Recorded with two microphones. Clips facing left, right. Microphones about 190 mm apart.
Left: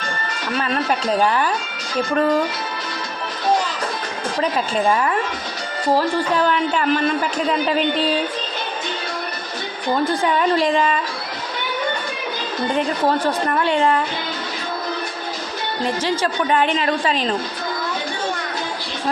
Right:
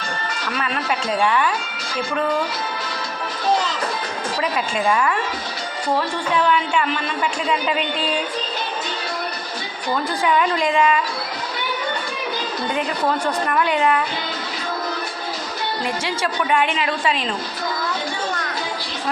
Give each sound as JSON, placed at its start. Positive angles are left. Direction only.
{"t": 0.5, "sound": "a man's voice", "side_deg": 40}
{"t": 4.4, "sound": "a man's voice", "side_deg": 35}
{"t": 10.2, "sound": "a man's voice", "side_deg": 35}
{"t": 13.2, "sound": "a man's voice", "side_deg": 30}
{"t": 15.8, "sound": "a man's voice", "side_deg": 35}